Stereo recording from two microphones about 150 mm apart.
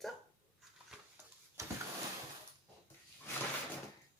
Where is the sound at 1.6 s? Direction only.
20° right (ahead or behind).